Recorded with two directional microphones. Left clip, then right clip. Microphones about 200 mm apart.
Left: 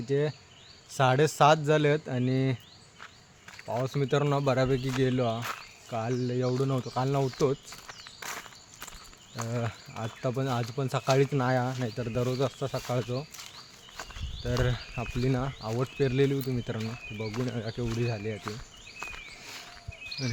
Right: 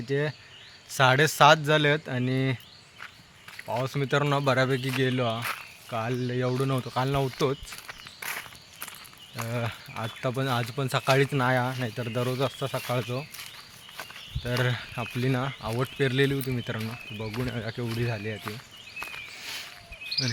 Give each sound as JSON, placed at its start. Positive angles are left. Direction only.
{"t": 0.1, "sound": "speech", "side_deg": 0}
{"t": 3.8, "sound": "speech", "side_deg": 0}
{"t": 5.4, "sound": "speech", "side_deg": -10}
{"t": 8.2, "sound": "walk", "side_deg": -10}
{"t": 9.3, "sound": "speech", "side_deg": -10}
{"t": 13.9, "sound": "a sound", "side_deg": -10}
{"t": 15.0, "sound": "speech", "side_deg": -10}
{"t": 18.4, "sound": "a sound", "side_deg": -15}
{"t": 19.4, "sound": "a sound", "side_deg": 0}